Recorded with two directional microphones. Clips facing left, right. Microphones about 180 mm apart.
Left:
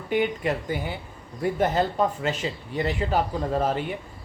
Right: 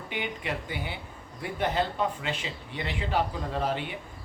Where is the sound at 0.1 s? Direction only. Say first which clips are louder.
Left 10 dB; 45° left (ahead or behind).